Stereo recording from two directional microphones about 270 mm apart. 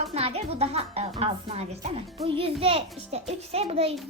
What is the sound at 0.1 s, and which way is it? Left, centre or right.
A child's voice, right.